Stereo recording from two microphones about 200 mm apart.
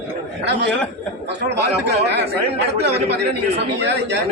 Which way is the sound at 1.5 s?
55° right (ahead or behind).